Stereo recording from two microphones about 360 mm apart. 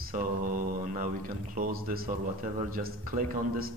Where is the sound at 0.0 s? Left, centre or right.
Right.